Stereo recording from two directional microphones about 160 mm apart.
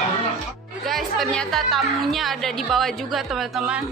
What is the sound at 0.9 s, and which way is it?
A woman's voice, centre (ahead or behind).